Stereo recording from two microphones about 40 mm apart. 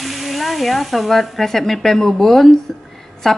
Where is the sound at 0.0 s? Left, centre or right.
Centre.